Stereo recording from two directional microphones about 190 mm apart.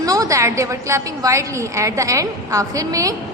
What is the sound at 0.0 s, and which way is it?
A woman's voice, 20° right (ahead or behind).